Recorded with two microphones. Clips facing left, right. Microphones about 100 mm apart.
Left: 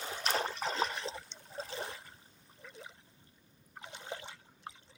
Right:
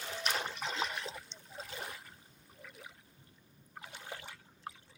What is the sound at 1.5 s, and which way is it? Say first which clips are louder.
Water: left 4 dB; 30° left (ahead or behind).